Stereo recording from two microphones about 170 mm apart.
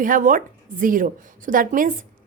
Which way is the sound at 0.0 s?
50° right (ahead or behind).